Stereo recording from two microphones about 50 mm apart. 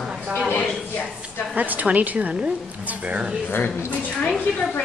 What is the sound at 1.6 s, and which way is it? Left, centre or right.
A woman's voice, right.